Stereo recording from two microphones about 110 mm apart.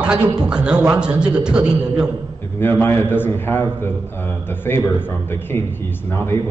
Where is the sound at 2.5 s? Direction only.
20° left (ahead or behind).